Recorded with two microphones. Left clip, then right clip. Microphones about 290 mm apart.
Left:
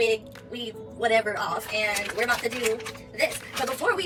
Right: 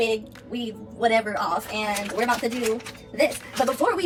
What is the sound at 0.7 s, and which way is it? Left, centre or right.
Speech, centre.